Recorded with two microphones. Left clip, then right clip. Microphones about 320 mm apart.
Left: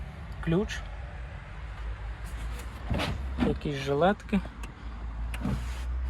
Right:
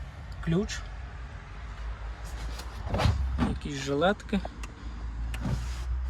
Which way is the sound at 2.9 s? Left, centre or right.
Centre.